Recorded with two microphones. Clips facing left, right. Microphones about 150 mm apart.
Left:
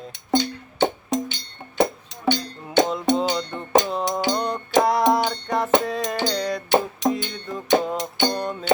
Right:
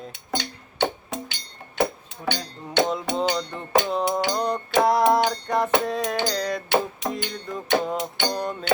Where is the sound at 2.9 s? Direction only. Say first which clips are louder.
Left 3 dB; centre (ahead or behind).